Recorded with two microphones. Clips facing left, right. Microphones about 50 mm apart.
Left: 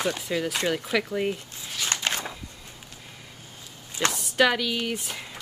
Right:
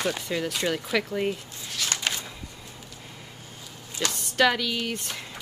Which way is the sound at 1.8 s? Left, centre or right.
Left.